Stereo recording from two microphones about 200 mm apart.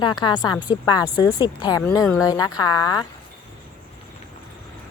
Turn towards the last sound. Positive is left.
turn(degrees=20)  # may be behind; listen again after turning